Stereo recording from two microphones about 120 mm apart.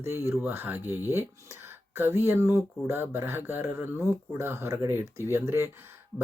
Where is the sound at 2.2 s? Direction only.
20° right (ahead or behind).